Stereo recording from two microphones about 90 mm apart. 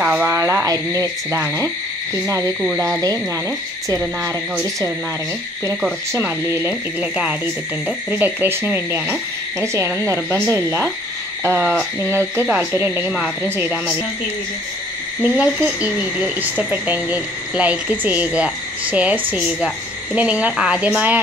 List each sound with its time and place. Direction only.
0.0 s speech: 15° right (ahead or behind)
0.3 s speech: 30° right (ahead or behind)
6.1 s speech: 30° right (ahead or behind)
7.0 s speech: 10° right (ahead or behind)
8.1 s speech: 25° right (ahead or behind)
15.2 s speech: 15° right (ahead or behind)
20.2 s speech: 15° right (ahead or behind)